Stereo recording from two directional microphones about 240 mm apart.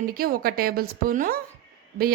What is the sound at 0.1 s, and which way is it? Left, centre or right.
A woman's voice, right.